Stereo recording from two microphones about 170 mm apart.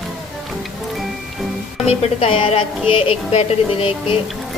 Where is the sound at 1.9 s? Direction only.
35° left (ahead or behind).